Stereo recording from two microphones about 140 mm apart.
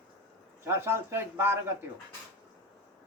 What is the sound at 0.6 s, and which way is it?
Speech, 20° right (ahead or behind).